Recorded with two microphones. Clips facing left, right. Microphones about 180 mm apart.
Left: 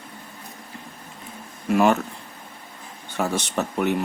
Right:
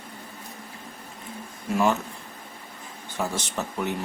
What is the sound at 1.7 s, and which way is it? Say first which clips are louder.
Speech: left 5 dB; 65° left (ahead or behind).